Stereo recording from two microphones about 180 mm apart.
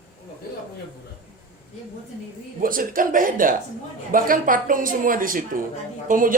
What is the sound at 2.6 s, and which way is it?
A woman's voice, 50° right (ahead or behind).